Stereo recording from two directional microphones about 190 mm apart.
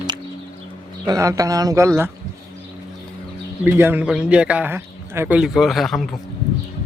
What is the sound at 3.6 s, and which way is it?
A man's voice, 10° right (ahead or behind).